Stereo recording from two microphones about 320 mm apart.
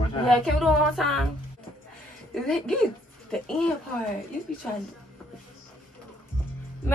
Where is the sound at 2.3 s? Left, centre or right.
Centre.